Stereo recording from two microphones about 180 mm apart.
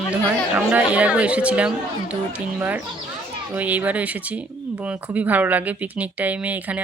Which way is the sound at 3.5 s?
10° right (ahead or behind).